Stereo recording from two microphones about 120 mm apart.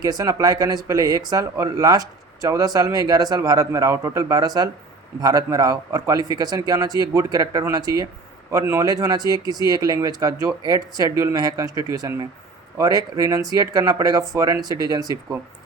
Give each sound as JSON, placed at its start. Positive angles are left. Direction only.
{"t": 0.0, "sound": "speech", "side_deg": -30}